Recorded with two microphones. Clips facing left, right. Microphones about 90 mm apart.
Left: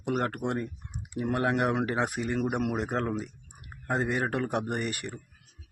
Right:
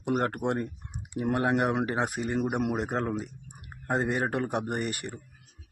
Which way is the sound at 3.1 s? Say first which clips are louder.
Even; centre (ahead or behind).